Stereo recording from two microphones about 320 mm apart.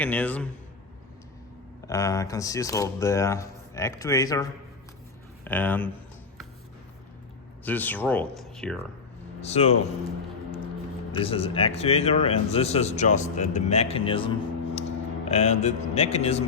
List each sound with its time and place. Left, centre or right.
0.0 s speech: centre
1.9 s speech: centre
5.5 s speech: centre
7.6 s speech: centre
9.4 s a man's voice: centre
11.2 s a man's voice: centre